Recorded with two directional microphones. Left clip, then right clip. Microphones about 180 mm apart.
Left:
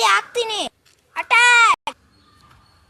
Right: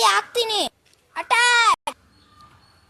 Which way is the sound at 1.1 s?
10° right (ahead or behind).